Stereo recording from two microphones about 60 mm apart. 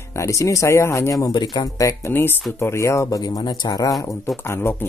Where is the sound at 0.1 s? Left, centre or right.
Left.